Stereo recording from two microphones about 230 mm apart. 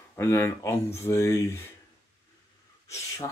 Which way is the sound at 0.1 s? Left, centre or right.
Centre.